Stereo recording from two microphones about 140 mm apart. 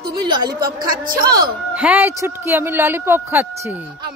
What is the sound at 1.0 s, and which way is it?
Speech, 85° right.